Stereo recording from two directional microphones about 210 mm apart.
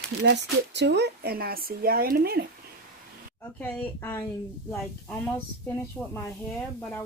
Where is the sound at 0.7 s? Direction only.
55° right (ahead or behind).